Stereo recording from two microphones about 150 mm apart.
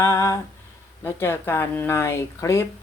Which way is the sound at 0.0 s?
20° left (ahead or behind).